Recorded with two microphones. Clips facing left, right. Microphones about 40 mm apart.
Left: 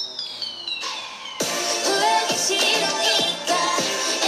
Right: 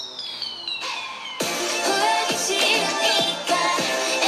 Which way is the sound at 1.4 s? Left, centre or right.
Right.